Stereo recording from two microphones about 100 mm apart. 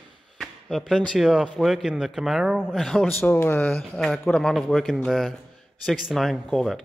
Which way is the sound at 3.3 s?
20° left (ahead or behind).